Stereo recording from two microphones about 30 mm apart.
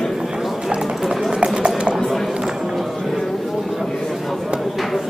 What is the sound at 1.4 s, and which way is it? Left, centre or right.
Music, right.